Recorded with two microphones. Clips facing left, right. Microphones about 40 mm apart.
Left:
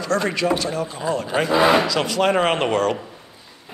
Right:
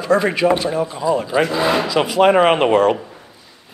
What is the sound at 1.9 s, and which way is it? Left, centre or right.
Speech, centre.